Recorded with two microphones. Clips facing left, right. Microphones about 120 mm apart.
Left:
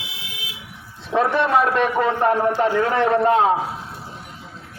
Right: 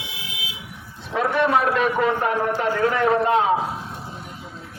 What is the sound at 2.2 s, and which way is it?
A man's voice, 40° left (ahead or behind).